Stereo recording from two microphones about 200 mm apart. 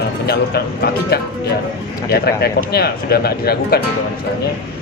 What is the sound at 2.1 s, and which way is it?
Speech, 50° left (ahead or behind).